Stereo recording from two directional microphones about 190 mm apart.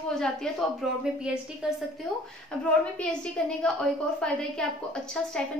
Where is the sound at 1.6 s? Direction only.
5° right (ahead or behind).